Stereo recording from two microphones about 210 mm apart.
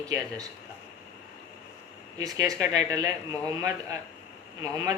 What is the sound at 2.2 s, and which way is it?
A man's voice, 15° right (ahead or behind).